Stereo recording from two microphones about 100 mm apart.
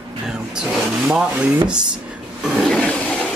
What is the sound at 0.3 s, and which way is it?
A man's voice, 10° right (ahead or behind).